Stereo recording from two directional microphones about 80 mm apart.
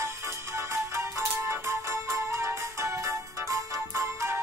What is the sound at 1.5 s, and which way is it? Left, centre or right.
Music, right.